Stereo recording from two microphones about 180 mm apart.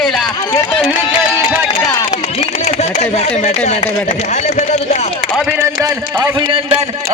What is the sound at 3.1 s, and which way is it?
A man's voice, 35° left (ahead or behind).